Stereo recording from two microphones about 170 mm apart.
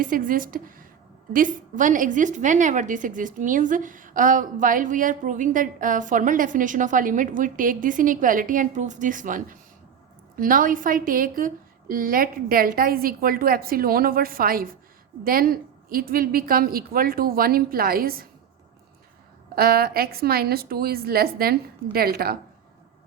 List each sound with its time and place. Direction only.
0.0 s a woman's voice: 55° right (ahead or behind)
19.5 s a woman's voice: 65° right (ahead or behind)